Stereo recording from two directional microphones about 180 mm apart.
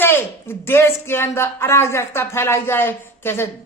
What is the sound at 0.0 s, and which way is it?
Speech, 10° left (ahead or behind).